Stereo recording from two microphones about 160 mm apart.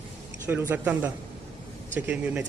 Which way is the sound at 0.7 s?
10° right (ahead or behind).